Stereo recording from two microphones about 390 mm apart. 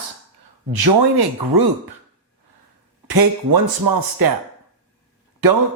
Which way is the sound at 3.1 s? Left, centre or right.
Right.